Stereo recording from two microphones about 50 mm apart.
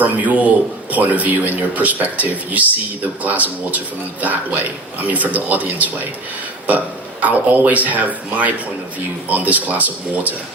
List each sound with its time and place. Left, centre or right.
0.0 s a man's voice: right